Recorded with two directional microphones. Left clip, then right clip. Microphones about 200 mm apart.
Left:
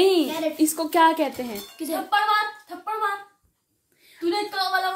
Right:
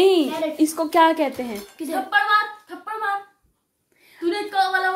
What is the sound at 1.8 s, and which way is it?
Speech, 15° right (ahead or behind).